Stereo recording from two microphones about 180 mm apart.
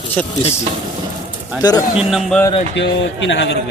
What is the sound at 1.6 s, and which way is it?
Speech, 25° left (ahead or behind).